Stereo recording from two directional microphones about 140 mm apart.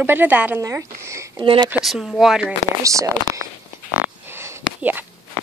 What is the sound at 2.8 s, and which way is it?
Speech, 20° right (ahead or behind).